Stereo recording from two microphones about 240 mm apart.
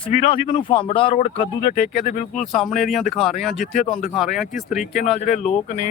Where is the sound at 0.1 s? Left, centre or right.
Left.